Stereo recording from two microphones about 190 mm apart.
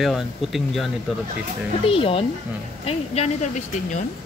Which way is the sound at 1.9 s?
30° left (ahead or behind).